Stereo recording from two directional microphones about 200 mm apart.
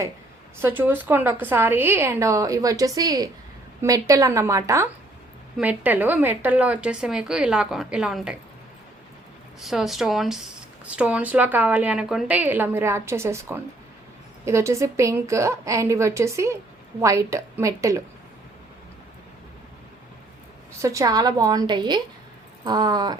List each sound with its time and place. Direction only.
0.6 s a woman's voice: 10° right (ahead or behind)
9.6 s speech: centre (ahead or behind)
20.8 s a woman's voice: 15° right (ahead or behind)